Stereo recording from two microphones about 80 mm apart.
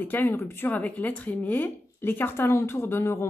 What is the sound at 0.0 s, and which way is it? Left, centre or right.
Speech, left.